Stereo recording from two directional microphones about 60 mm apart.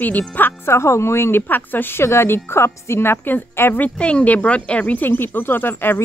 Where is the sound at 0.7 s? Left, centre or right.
Left.